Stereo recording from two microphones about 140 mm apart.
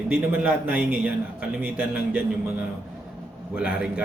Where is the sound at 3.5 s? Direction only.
5° right (ahead or behind).